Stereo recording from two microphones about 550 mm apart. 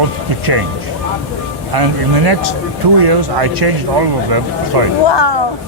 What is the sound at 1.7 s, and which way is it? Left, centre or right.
Speech, right.